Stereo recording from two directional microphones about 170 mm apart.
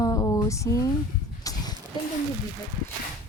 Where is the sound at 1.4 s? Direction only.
20° left (ahead or behind).